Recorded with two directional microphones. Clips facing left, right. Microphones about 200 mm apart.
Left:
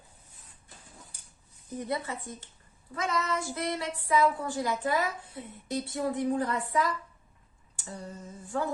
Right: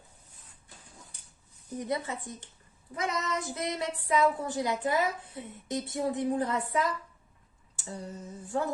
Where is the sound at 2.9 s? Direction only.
20° right (ahead or behind).